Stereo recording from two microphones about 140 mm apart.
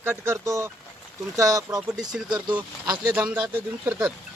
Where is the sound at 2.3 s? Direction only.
30° right (ahead or behind).